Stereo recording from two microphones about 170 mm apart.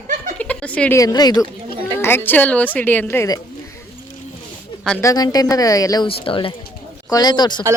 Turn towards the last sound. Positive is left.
turn(degrees=25)  # may be behind; listen again after turning